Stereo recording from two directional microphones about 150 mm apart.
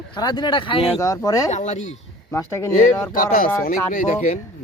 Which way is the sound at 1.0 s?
20° left (ahead or behind).